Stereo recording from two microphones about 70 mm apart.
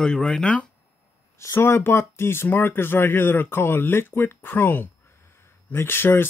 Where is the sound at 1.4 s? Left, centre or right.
Left.